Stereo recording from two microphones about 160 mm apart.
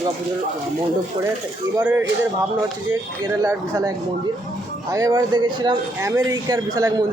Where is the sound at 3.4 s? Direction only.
20° right (ahead or behind).